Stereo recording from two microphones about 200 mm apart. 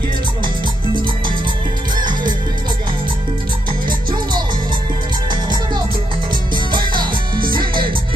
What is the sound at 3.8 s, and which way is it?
Music, 25° right (ahead or behind).